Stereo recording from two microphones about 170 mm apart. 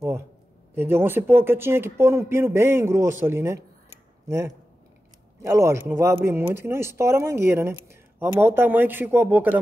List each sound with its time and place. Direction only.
0.7 s speech: 15° right (ahead or behind)